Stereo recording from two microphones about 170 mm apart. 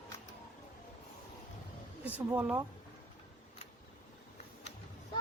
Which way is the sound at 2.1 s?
10° right (ahead or behind).